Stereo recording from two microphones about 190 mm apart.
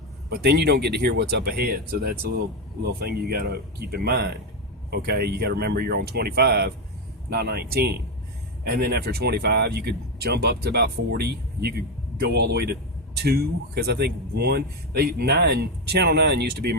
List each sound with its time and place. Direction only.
0.3 s speech: 60° right (ahead or behind)